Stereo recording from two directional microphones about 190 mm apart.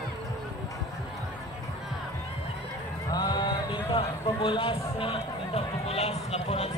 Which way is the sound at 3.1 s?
20° left (ahead or behind).